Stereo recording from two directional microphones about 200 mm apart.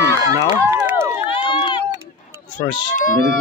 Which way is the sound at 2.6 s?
20° left (ahead or behind).